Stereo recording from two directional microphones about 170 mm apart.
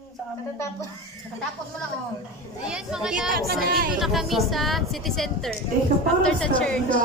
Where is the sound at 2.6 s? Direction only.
5° right (ahead or behind).